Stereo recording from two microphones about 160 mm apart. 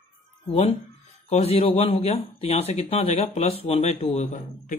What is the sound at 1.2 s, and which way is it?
Speech, 40° left (ahead or behind).